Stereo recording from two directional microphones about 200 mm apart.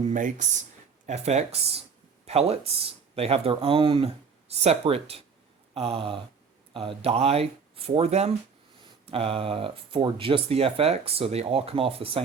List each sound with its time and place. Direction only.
0.0 s speech: 40° right (ahead or behind)